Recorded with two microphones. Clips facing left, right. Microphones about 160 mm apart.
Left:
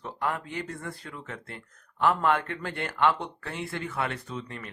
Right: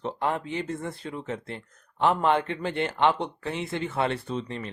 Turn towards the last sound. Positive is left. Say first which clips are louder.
# right 6 dB
turn(degrees=-25)  # may be behind; listen again after turning